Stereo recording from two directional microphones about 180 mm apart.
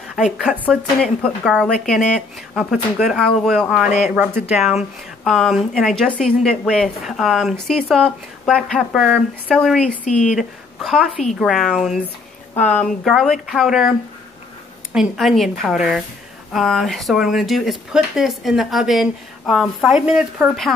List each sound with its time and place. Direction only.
0.1 s a woman's voice: centre (ahead or behind)
10.0 s speech: 40° left (ahead or behind)
10.3 s a woman's voice: centre (ahead or behind)